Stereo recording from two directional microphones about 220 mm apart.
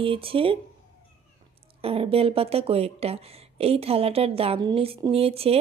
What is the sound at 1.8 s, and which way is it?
Speech, 25° right (ahead or behind).